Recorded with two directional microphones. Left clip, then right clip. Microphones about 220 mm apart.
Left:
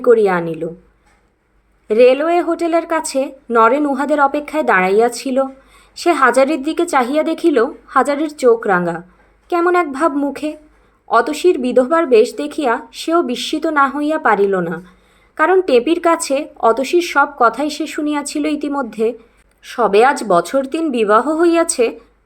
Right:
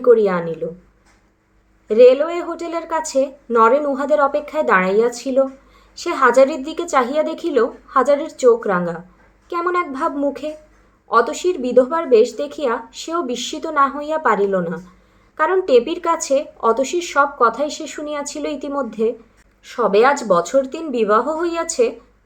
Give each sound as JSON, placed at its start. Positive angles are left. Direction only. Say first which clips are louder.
{"t": 0.0, "sound": "a woman's voice", "louder": "left 2 dB", "side_deg": 30}
{"t": 1.9, "sound": "a woman's voice", "louder": "even", "side_deg": 25}